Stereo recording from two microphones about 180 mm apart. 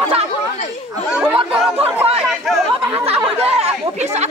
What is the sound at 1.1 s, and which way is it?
Chatter, 5° right (ahead or behind).